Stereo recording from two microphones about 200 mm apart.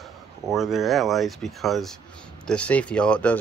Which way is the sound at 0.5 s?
Centre (ahead or behind).